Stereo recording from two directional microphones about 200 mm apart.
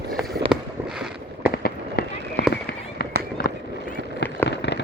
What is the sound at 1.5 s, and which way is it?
Fireworks, 50° left (ahead or behind).